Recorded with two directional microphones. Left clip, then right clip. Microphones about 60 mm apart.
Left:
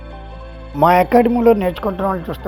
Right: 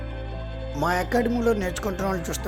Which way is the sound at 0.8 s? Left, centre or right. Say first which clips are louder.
Left 12 dB; left.